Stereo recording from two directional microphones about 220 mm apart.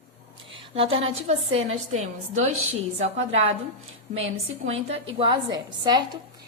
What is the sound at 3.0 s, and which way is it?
A woman's voice, 30° right (ahead or behind).